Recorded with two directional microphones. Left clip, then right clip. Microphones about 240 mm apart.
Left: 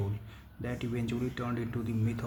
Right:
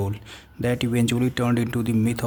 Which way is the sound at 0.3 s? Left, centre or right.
Right.